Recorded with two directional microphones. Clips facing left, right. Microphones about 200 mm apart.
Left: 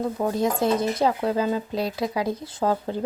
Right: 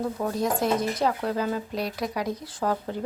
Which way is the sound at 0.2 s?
25° left (ahead or behind).